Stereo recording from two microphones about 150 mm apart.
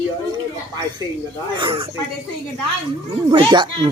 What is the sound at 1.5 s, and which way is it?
Speech, 35° right (ahead or behind).